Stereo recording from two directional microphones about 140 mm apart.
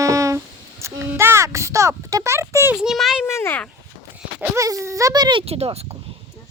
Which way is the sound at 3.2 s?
20° left (ahead or behind).